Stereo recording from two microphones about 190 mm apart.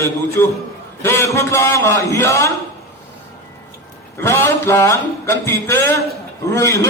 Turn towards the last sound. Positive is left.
turn(degrees=15)  # may be behind; listen again after turning